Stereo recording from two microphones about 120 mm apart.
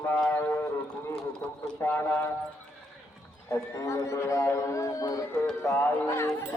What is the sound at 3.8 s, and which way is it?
A man's voice, 25° left (ahead or behind).